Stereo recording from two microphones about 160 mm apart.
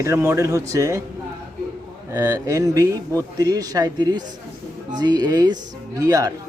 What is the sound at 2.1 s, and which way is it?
Speech, 20° right (ahead or behind).